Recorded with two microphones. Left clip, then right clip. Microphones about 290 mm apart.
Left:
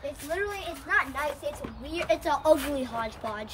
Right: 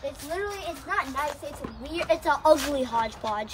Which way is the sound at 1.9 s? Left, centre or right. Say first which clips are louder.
Right 2 dB; centre.